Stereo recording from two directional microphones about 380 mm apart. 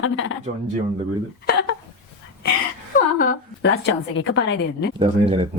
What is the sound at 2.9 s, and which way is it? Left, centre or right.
A woman's voice, left.